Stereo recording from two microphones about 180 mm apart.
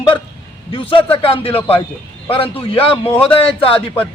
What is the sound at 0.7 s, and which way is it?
A man's voice, 30° left (ahead or behind).